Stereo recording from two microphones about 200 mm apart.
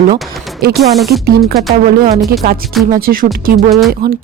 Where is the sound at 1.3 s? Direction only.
50° right (ahead or behind).